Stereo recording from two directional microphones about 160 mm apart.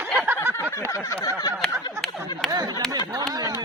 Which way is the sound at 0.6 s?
15° left (ahead or behind).